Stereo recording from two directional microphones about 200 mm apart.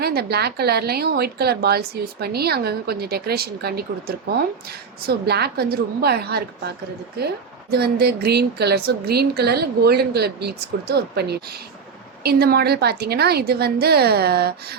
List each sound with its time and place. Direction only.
0.0 s a woman's voice: 55° right (ahead or behind)
7.7 s a woman's voice: 50° right (ahead or behind)